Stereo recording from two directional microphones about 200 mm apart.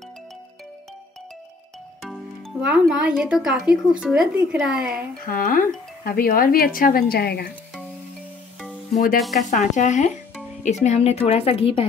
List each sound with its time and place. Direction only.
2.6 s a woman's voice: 5° right (ahead or behind)
5.2 s speech: 45° left (ahead or behind)
8.9 s a woman's voice: 40° left (ahead or behind)